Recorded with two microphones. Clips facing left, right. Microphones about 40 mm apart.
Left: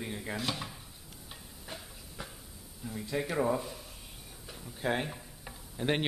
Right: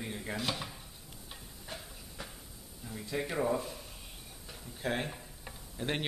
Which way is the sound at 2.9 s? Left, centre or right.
Centre.